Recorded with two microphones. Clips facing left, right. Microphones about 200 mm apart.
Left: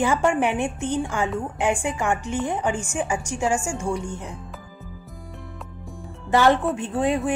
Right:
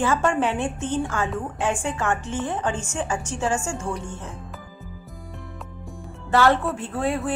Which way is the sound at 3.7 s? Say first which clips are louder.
Left 3 dB; 5° right (ahead or behind).